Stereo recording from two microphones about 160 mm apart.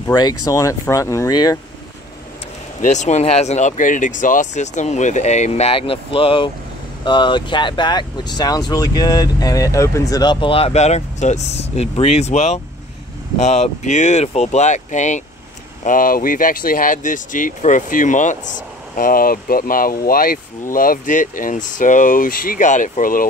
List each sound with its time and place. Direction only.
0.0 s speech: 25° left (ahead or behind)
2.8 s speech: 50° left (ahead or behind)